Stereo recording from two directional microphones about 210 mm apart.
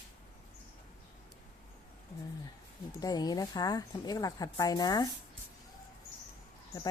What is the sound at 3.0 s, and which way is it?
Speech, 20° left (ahead or behind).